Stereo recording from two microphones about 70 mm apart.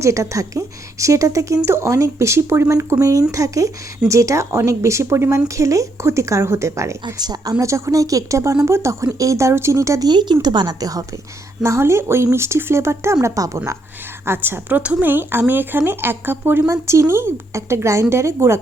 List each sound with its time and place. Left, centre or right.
0.0 s speech: right
2.7 s speech: right
7.0 s a woman's voice: right
7.6 s speech: right
10.1 s a woman's voice: right
11.6 s speech: right
14.3 s speech: right
14.7 s speech: centre; by 18.6 s right